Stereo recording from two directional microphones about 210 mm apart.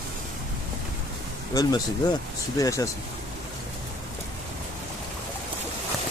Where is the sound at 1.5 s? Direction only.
20° left (ahead or behind).